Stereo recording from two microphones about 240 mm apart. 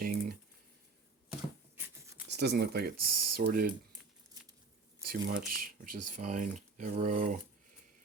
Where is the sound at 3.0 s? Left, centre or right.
Right.